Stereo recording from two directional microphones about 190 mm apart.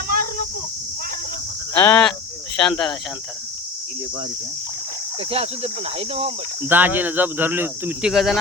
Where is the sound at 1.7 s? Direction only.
10° left (ahead or behind).